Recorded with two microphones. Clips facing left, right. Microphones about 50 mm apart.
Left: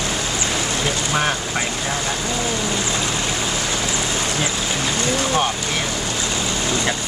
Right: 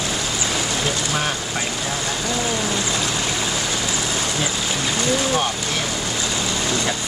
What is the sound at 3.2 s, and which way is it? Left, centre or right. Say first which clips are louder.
Vehicle: left 1 dB; centre.